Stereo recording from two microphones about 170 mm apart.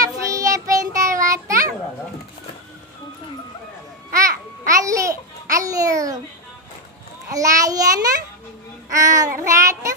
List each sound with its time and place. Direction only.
0.0 s child singing: 20° right (ahead or behind)
4.2 s babbling: 20° right (ahead or behind)
7.2 s child singing: 20° right (ahead or behind)